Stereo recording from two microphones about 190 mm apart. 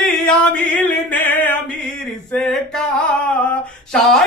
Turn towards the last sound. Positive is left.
turn(degrees=0)  # may be behind; listen again after turning